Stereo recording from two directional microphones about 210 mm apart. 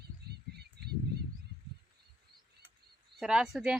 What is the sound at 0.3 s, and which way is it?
Bird, 50° right (ahead or behind).